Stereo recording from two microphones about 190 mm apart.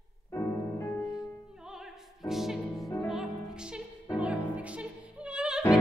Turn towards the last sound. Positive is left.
turn(degrees=-5)  # may be behind; listen again after turning